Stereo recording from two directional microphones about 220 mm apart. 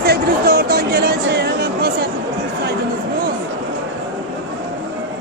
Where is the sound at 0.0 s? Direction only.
45° right (ahead or behind).